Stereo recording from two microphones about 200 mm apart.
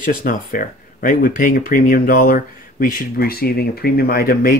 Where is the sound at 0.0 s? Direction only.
45° left (ahead or behind).